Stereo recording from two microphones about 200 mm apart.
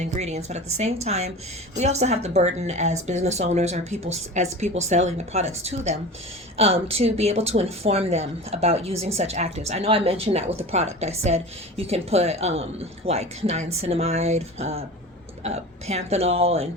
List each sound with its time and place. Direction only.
0.0 s speech: 35° right (ahead or behind)